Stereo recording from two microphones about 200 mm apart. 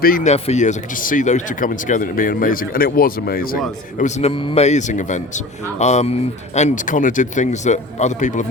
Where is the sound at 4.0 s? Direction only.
35° left (ahead or behind).